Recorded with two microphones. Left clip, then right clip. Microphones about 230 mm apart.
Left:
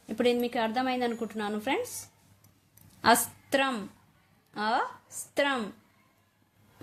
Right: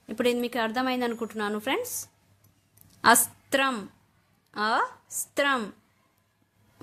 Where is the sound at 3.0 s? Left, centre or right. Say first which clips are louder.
Right 3 dB; centre.